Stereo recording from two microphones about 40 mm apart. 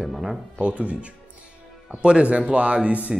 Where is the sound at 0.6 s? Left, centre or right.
Right.